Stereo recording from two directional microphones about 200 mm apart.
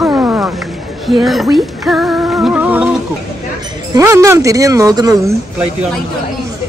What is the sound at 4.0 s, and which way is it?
Speech, 15° right (ahead or behind).